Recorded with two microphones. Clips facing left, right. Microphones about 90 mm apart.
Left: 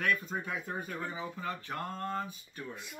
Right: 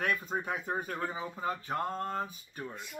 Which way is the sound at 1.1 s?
25° right (ahead or behind).